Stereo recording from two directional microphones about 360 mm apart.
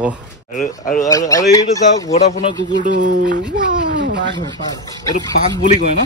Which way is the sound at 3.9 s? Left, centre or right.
Right.